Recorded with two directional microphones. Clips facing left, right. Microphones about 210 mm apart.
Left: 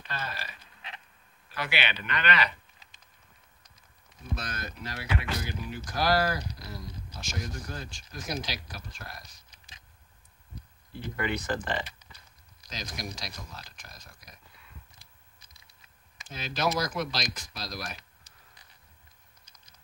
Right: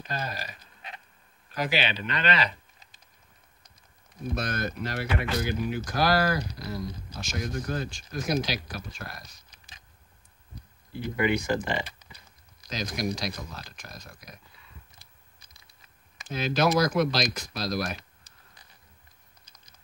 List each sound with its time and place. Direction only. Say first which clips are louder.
0.0 s a sound: right 4 dB; 40° right (ahead or behind)
1.5 s speech: right 5 dB; 35° right (ahead or behind)
4.4 s speech: right 8 dB; 60° right (ahead or behind)
11.0 s speech: right 6 dB; 10° right (ahead or behind)
12.6 s speech: right 9 dB; 65° right (ahead or behind)
16.2 s speech: right 7 dB; 60° right (ahead or behind)